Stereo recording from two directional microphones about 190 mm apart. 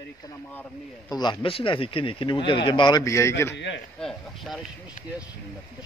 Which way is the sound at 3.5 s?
65° left (ahead or behind).